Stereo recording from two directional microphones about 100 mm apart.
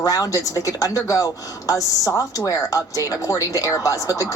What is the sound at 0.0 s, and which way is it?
A woman's voice, 40° left (ahead or behind).